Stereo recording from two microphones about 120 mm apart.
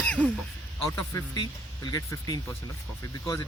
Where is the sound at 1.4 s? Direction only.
35° left (ahead or behind).